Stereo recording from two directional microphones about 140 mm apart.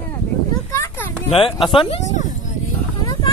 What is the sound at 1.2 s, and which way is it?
Speech, 40° left (ahead or behind).